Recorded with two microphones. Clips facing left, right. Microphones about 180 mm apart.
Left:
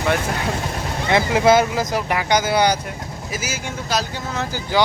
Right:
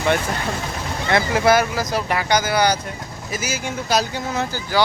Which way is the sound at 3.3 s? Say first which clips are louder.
Right 2 dB; 5° left (ahead or behind).